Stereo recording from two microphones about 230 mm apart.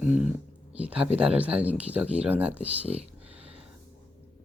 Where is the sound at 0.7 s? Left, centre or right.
Centre.